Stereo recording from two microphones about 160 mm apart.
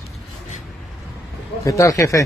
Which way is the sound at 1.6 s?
20° left (ahead or behind).